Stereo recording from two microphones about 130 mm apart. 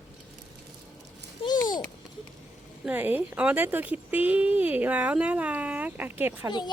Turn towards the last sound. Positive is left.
turn(degrees=-15)  # may be behind; listen again after turning